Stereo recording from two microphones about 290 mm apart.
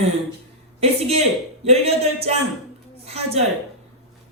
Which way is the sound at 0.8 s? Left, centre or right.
Right.